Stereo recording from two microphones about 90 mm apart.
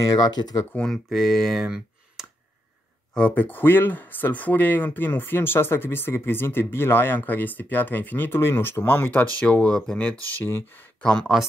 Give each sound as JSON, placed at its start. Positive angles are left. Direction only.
{"t": 0.1, "sound": "speech", "side_deg": 50}
{"t": 0.7, "sound": "speech", "side_deg": 5}
{"t": 3.2, "sound": "speech", "side_deg": 20}
{"t": 9.4, "sound": "speech", "side_deg": 10}
{"t": 10.4, "sound": "speech", "side_deg": 25}
{"t": 11.0, "sound": "speech", "side_deg": 10}